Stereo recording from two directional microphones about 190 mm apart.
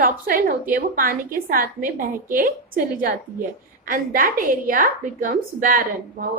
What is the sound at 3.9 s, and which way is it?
A woman's voice, 50° right (ahead or behind).